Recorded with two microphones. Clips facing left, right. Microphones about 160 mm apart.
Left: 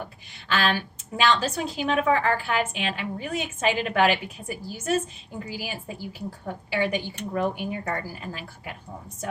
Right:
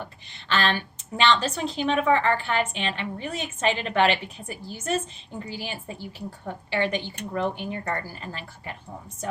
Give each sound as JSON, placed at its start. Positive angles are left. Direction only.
{"t": 0.0, "sound": "a woman's voice", "side_deg": 10}